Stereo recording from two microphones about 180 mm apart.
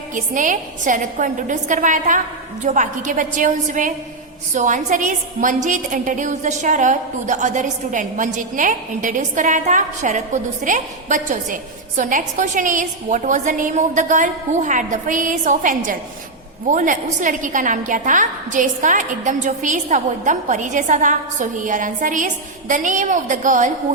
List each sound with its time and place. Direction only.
0.1 s a woman's voice: 45° right (ahead or behind)